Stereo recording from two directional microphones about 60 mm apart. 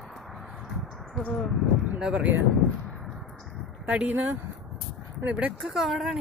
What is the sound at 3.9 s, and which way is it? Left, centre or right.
Speech, right.